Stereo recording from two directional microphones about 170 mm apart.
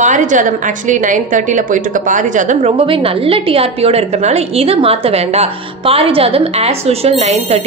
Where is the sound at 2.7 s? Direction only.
30° right (ahead or behind).